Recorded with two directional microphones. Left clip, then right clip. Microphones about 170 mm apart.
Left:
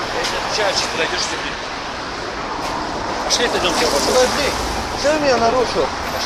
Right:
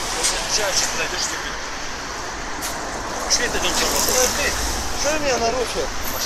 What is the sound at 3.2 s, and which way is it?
Speech, 45° left (ahead or behind).